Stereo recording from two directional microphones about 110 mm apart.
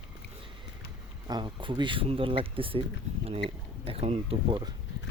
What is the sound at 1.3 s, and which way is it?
Speech, 45° right (ahead or behind).